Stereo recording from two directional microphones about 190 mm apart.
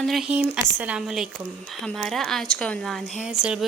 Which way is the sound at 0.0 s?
Centre (ahead or behind).